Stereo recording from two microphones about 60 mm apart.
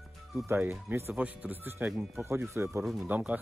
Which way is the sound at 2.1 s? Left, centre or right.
Right.